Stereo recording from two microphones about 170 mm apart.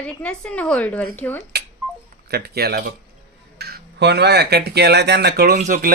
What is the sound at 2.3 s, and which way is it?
Speech, 70° right (ahead or behind).